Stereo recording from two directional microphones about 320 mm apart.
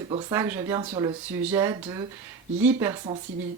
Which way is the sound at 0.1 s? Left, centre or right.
Centre.